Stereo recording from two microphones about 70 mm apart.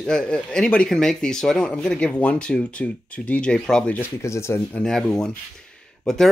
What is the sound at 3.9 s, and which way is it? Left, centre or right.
Speech, left.